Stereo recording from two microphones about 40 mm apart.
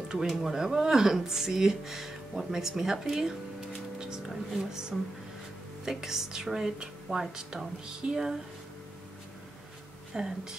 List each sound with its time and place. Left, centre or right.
0.4 s speech: centre
10.1 s speech: centre